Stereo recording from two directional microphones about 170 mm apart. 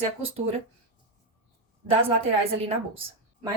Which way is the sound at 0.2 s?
35° right (ahead or behind).